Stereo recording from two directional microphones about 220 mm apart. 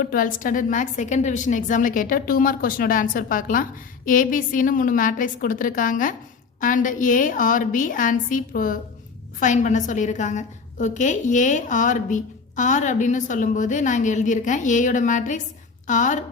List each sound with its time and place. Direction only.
0.0 s a woman's voice: 40° left (ahead or behind)